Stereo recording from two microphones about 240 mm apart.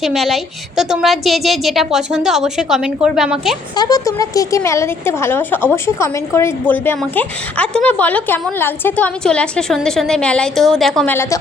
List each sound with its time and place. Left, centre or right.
0.0 s a woman's voice: centre
3.8 s speech: centre